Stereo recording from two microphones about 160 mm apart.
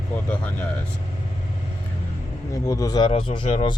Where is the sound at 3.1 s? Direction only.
35° left (ahead or behind).